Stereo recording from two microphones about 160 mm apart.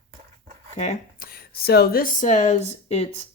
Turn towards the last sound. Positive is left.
turn(degrees=45)  # may be behind; listen again after turning